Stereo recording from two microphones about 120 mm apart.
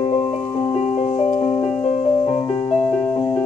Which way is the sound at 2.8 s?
10° left (ahead or behind).